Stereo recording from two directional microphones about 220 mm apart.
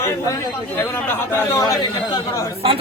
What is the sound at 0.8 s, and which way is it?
A man's voice, 10° left (ahead or behind).